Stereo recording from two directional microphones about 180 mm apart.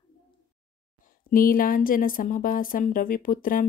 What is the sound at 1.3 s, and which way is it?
Speech, 50° left (ahead or behind).